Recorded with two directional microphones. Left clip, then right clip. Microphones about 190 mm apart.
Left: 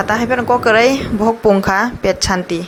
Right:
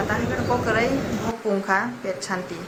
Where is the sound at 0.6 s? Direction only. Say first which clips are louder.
Left 11 dB; 50° left (ahead or behind).